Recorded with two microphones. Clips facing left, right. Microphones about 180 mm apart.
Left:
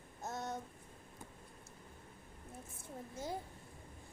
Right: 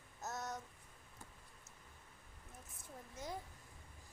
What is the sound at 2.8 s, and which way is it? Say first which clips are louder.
Speech: left 5 dB; 30° left (ahead or behind).